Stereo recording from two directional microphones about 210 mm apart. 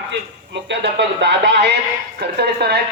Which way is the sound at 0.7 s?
55° right (ahead or behind).